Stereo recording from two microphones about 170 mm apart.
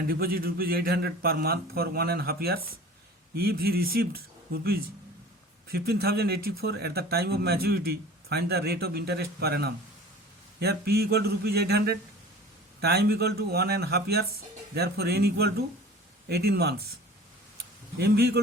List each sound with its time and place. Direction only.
0.1 s speech: 60° right (ahead or behind)
17.9 s speech: 75° right (ahead or behind)